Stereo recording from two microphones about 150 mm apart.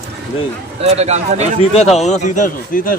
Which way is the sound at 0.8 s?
45° right (ahead or behind).